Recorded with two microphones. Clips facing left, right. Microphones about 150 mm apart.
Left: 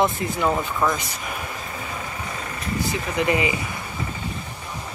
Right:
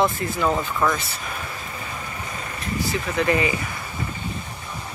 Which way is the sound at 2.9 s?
20° left (ahead or behind).